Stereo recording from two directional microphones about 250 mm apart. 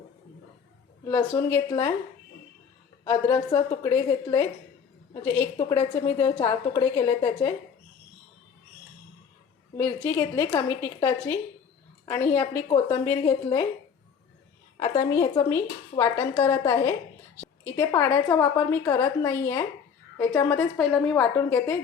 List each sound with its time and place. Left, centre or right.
1.0 s a woman's voice: centre
3.0 s a woman's voice: centre
9.7 s a woman's voice: centre
12.6 s a woman's voice: left
15.1 s a woman's voice: centre